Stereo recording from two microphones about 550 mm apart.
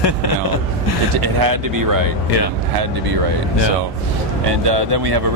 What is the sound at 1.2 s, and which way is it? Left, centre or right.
Speech, right.